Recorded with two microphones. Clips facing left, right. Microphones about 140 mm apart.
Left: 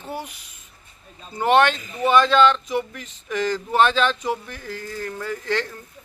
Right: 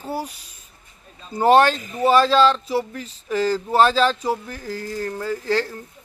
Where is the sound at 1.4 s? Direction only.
35° right (ahead or behind).